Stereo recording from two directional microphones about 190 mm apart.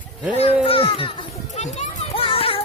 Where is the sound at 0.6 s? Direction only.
30° left (ahead or behind).